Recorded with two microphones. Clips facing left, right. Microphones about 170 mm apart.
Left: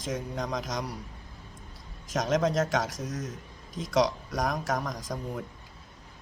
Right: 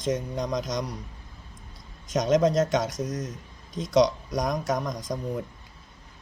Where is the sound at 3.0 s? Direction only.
45° right (ahead or behind).